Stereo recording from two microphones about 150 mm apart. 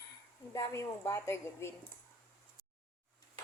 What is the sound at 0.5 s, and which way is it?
A woman's voice, 20° left (ahead or behind).